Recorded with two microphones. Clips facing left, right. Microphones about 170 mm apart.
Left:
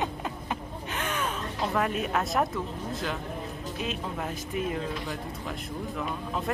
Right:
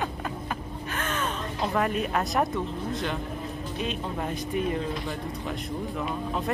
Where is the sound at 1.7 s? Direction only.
Centre (ahead or behind).